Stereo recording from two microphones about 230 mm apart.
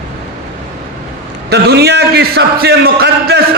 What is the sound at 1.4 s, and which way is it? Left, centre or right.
A man's voice, right.